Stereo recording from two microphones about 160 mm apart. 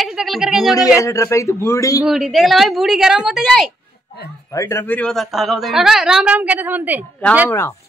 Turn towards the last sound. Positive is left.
turn(degrees=15)  # may be behind; listen again after turning